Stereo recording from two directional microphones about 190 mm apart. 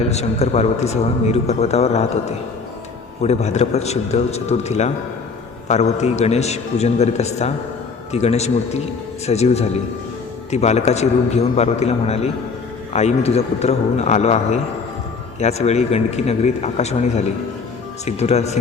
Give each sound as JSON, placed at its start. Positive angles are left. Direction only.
{"t": 0.1, "sound": "a man's voice", "side_deg": 35}